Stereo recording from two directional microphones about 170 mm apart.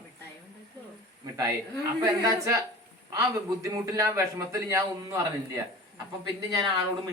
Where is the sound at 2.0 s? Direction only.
20° right (ahead or behind).